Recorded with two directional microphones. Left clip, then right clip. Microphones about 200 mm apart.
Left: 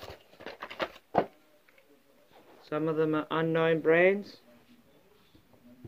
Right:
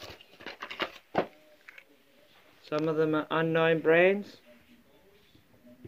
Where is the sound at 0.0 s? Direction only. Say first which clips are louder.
Even; 40° left (ahead or behind).